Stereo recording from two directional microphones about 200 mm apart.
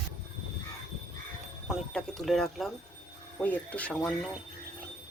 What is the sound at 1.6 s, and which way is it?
Speech, centre (ahead or behind).